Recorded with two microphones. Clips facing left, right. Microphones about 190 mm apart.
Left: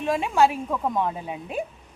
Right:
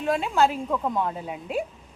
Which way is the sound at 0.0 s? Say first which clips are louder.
Left 1 dB; 15° left (ahead or behind).